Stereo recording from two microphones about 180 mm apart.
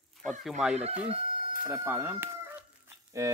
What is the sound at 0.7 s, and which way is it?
Speech, 35° right (ahead or behind).